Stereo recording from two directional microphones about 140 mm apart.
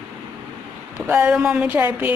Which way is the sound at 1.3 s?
5° right (ahead or behind).